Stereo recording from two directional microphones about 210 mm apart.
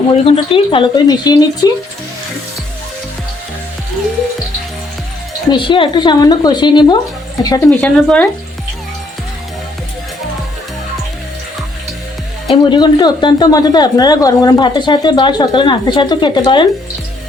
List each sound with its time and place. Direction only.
0.1 s speech: 25° left (ahead or behind)
5.5 s speech: 25° left (ahead or behind)
7.8 s speech: 5° left (ahead or behind)
12.5 s speech: 20° left (ahead or behind)